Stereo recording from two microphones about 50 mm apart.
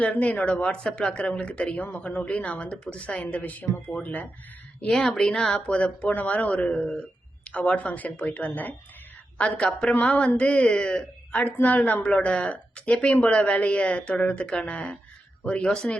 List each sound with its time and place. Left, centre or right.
0.0 s a woman's voice: left
4.9 s speech: centre
5.5 s a woman's voice: left
9.6 s a woman's voice: centre; by 12.0 s left
12.0 s a woman's voice: left